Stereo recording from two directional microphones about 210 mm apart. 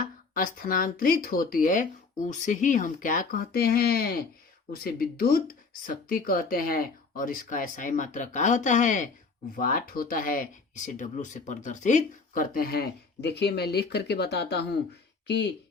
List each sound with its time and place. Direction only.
0.3 s speech: 40° left (ahead or behind)